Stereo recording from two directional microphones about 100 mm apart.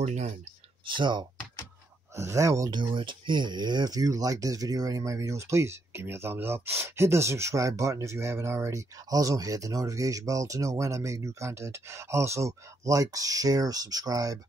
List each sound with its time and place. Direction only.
0.8 s speech: 50° right (ahead or behind)
2.1 s speech: 30° right (ahead or behind)
2.7 s speech: 55° right (ahead or behind); by 14.4 s 35° right (ahead or behind)